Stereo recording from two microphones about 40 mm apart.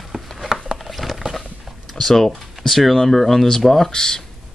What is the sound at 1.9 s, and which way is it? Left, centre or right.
Speech, centre.